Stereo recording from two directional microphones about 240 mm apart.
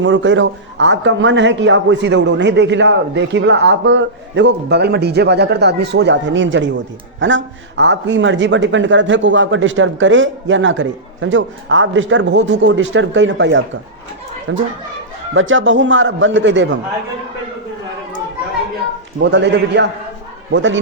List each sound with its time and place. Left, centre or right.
0.0 s a man's voice: right
19.2 s a man's voice: right